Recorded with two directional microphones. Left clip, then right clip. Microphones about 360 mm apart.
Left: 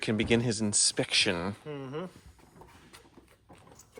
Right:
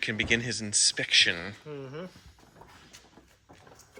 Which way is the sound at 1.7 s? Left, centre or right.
Left.